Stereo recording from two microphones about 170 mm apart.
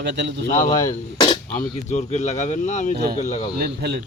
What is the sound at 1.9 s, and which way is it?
Speech, 40° left (ahead or behind).